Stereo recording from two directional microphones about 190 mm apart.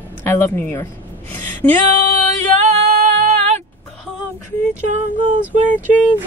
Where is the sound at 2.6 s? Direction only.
35° right (ahead or behind).